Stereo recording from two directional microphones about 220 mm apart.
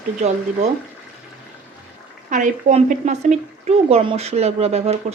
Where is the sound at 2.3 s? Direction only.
35° right (ahead or behind).